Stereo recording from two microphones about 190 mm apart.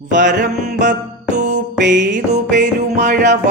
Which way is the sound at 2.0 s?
40° right (ahead or behind).